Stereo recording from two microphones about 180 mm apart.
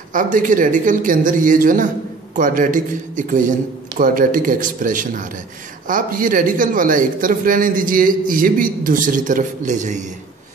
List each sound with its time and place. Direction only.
0.1 s a man's voice: 45° right (ahead or behind)